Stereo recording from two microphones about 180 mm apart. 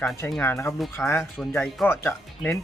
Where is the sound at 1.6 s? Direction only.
Centre (ahead or behind).